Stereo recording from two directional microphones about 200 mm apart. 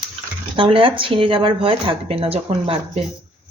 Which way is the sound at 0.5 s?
25° right (ahead or behind).